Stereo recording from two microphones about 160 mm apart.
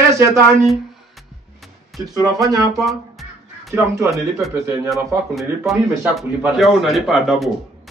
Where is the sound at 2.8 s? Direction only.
Centre (ahead or behind).